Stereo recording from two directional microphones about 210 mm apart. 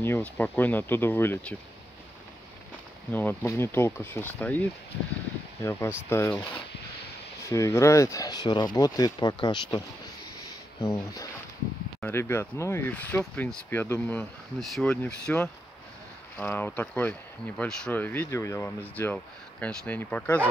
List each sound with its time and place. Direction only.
0.0 s speech: 10° left (ahead or behind)
3.1 s speech: 10° left (ahead or behind)
7.4 s speech: 15° left (ahead or behind)